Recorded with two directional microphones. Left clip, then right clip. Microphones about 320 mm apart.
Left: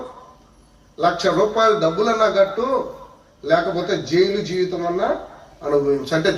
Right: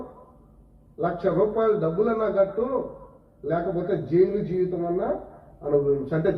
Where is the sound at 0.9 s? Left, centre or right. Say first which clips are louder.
Left 6 dB; left.